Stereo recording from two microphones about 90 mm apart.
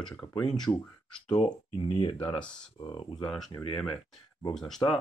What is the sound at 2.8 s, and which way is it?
Speech, 55° left (ahead or behind).